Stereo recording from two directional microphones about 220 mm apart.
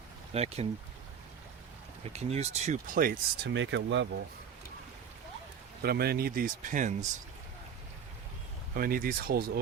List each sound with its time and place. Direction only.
0.3 s speech: 30° right (ahead or behind)
2.1 s speech: 30° right (ahead or behind)
3.5 s speech: 55° right (ahead or behind)
5.8 s speech: 45° right (ahead or behind)
8.7 s speech: 40° right (ahead or behind)